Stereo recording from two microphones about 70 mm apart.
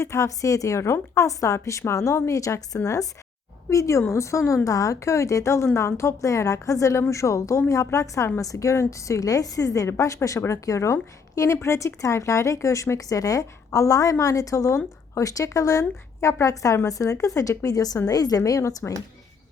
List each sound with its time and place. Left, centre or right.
0.0 s a woman's voice: left